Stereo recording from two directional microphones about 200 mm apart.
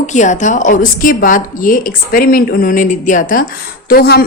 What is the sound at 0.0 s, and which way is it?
A woman's voice, 35° left (ahead or behind).